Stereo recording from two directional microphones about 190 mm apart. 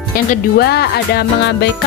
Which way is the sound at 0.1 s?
50° left (ahead or behind).